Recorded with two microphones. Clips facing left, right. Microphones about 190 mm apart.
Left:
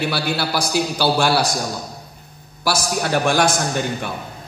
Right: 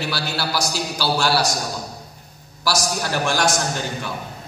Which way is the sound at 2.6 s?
55° left (ahead or behind).